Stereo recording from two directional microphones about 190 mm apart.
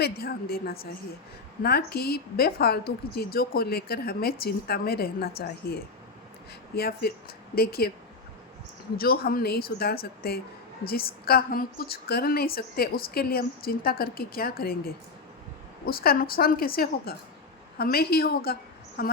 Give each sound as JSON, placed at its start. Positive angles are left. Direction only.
{"t": 0.0, "sound": "a woman's voice", "side_deg": 55}
{"t": 9.0, "sound": "a woman's voice", "side_deg": 50}